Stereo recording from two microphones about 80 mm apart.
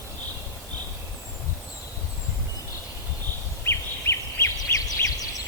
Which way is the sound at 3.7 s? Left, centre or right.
Left.